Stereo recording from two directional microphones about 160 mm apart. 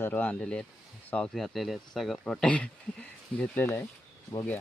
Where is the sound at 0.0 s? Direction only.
10° left (ahead or behind).